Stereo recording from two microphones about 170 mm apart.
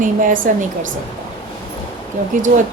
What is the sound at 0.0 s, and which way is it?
Speech, 50° right (ahead or behind).